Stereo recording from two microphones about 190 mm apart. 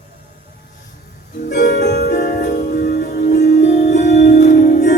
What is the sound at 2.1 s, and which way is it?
Music, 45° left (ahead or behind).